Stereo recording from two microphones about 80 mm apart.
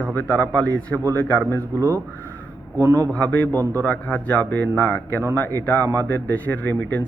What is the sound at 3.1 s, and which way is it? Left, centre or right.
Speech, centre.